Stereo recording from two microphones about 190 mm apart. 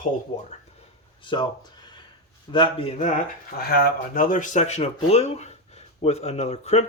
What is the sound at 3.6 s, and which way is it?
Speech, 55° left (ahead or behind).